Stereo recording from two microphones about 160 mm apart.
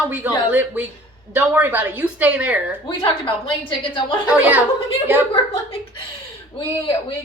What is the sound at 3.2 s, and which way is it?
Speech, 30° left (ahead or behind).